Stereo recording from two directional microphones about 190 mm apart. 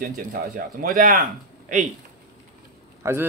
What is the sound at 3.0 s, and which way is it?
Speech, 15° right (ahead or behind).